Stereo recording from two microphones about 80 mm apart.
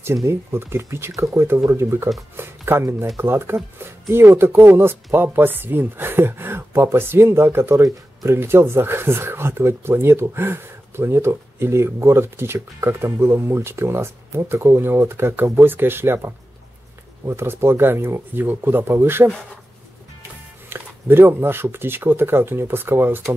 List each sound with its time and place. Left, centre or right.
0.0 s speech: right
20.7 s speech: right